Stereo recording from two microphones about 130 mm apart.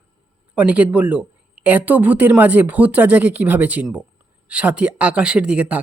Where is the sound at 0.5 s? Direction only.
10° right (ahead or behind).